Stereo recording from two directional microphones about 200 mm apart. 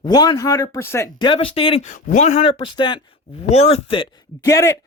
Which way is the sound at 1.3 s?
30° left (ahead or behind).